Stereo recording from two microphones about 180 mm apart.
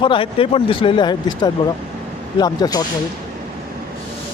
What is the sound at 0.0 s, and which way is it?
Speech, 30° left (ahead or behind).